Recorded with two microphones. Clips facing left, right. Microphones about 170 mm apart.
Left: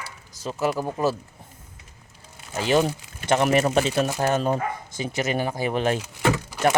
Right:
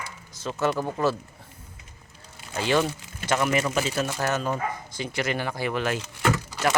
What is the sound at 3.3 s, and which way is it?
Speech, 35° left (ahead or behind).